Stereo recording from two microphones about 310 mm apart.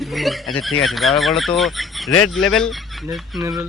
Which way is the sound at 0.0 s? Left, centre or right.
Centre.